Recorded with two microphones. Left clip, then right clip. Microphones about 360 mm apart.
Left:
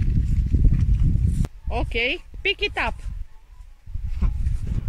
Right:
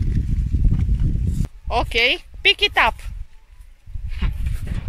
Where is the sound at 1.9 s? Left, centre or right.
Centre.